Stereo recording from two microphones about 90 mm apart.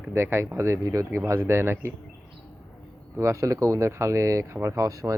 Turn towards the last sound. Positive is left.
turn(degrees=-40)  # may be behind; listen again after turning